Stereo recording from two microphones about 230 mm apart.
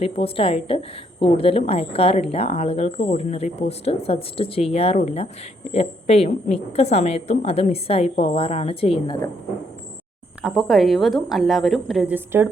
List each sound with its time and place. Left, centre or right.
0.0 s a woman's voice: left
10.4 s a woman's voice: centre